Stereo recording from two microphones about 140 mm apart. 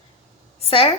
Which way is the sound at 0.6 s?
40° left (ahead or behind).